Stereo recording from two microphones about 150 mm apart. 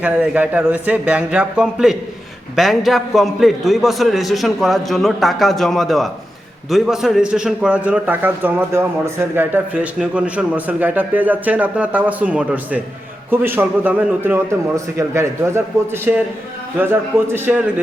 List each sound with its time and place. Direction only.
0.0 s a man's voice: 10° right (ahead or behind)